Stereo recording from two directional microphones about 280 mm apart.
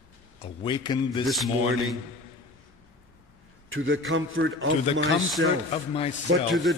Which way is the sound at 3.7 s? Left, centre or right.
Right.